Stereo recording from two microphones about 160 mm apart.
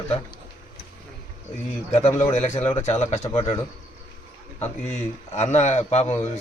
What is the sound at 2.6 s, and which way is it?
Speech, 15° left (ahead or behind).